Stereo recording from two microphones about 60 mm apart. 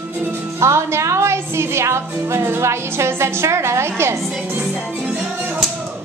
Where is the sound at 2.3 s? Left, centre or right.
Right.